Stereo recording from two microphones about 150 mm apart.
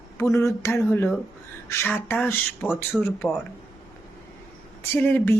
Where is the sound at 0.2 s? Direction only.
20° left (ahead or behind); by 3.1 s centre (ahead or behind).